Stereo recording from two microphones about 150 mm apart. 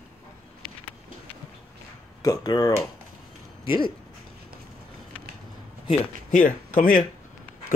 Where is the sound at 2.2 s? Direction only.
25° left (ahead or behind).